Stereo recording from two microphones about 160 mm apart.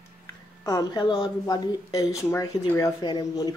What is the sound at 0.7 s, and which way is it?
Speech, 25° left (ahead or behind).